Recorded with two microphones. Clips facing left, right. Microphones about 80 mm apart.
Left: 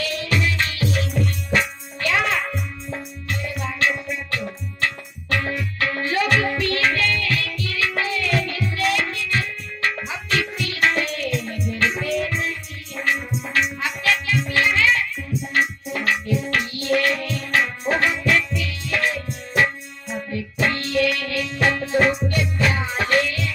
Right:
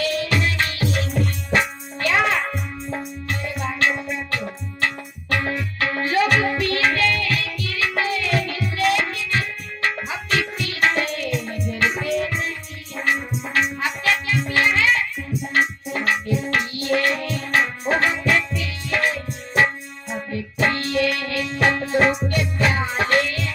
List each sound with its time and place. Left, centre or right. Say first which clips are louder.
0.0 s music: right 2 dB; right